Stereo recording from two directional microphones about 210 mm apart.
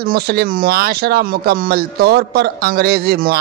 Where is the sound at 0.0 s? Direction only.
45° right (ahead or behind).